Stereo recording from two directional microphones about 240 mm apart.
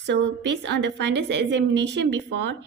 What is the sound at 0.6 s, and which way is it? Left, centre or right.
A woman's voice, right.